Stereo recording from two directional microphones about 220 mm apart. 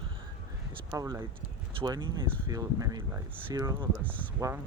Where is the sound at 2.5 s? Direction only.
15° right (ahead or behind).